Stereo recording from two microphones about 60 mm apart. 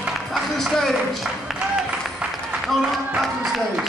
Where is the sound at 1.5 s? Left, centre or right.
Centre.